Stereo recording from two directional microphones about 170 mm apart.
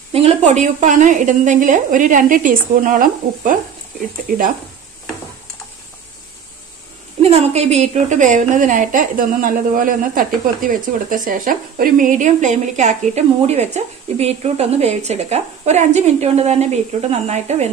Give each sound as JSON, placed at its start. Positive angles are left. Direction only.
{"t": 0.1, "sound": "a woman's voice", "side_deg": -40}
{"t": 7.2, "sound": "a woman's voice", "side_deg": -35}